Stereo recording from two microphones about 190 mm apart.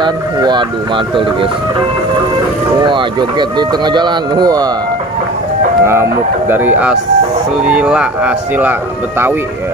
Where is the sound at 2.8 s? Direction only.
25° right (ahead or behind).